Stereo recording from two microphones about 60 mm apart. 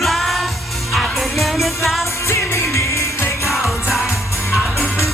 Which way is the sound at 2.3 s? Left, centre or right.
Left.